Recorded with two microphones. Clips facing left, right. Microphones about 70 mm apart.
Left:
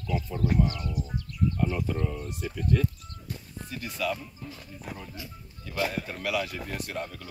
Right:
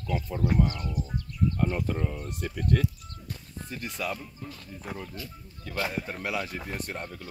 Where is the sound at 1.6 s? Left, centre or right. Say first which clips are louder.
Even; right.